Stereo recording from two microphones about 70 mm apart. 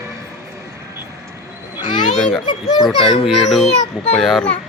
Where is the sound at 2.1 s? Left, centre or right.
Centre.